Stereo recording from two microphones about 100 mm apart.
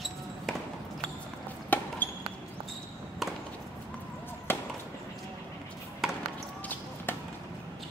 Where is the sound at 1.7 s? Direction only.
15° left (ahead or behind).